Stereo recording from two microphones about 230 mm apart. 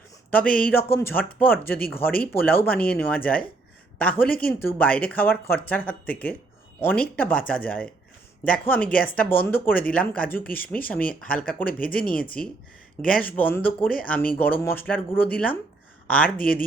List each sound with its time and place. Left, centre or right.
0.3 s speech: centre